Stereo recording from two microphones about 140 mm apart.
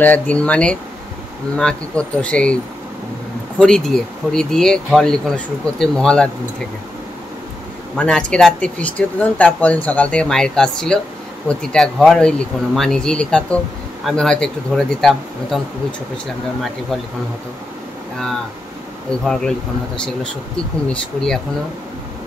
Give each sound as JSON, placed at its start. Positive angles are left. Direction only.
{"t": 0.0, "sound": "speech", "side_deg": 10}
{"t": 8.0, "sound": "speech", "side_deg": 10}
{"t": 19.2, "sound": "speech", "side_deg": 5}
{"t": 20.5, "sound": "speech", "side_deg": 5}